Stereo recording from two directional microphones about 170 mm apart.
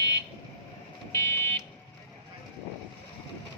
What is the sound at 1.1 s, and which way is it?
Fire alarm, 15° left (ahead or behind).